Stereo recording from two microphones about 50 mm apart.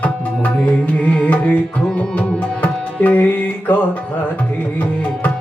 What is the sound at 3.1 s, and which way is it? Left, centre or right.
Music, left.